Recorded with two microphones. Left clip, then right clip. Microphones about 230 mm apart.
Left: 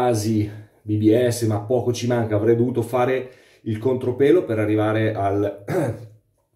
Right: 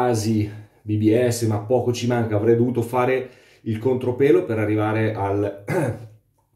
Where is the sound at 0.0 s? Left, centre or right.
Centre.